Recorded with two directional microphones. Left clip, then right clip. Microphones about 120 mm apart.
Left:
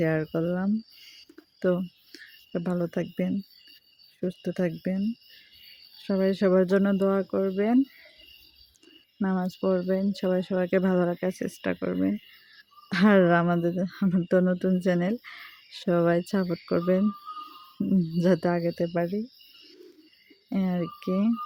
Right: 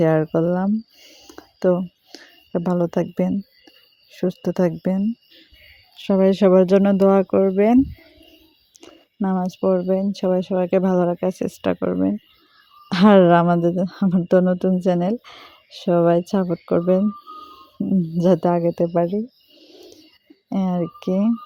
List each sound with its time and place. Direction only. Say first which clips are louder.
0.0 s speech: right 9 dB; 35° right (ahead or behind)
6.0 s speech: right 9 dB; 50° right (ahead or behind)
9.3 s speech: right 7 dB; 30° right (ahead or behind)
9.6 s speech: right 7 dB; 20° right (ahead or behind)
18.2 s speech: right 8 dB; 25° right (ahead or behind)
20.5 s speech: right 6 dB; 25° right (ahead or behind)